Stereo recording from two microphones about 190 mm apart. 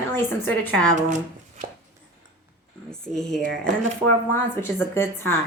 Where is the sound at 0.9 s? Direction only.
40° right (ahead or behind).